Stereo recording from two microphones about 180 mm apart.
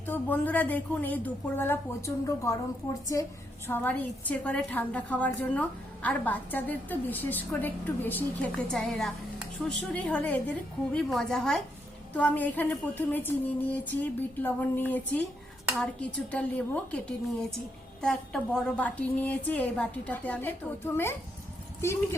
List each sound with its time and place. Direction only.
0.0 s a woman's voice: 10° left (ahead or behind)
18.0 s a woman's voice: 5° left (ahead or behind)